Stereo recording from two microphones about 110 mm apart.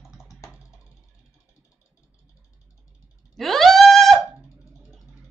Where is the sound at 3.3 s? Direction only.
Centre (ahead or behind).